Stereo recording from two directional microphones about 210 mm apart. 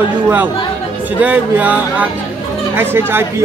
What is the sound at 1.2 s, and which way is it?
Speech, 5° right (ahead or behind).